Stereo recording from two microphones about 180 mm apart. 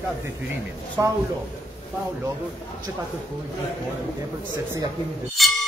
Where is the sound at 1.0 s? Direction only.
20° right (ahead or behind).